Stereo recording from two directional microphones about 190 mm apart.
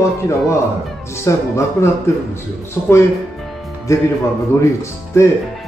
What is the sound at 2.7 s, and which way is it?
A man's voice, 15° left (ahead or behind).